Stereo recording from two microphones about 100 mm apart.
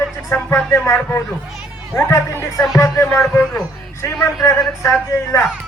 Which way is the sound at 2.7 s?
30° left (ahead or behind).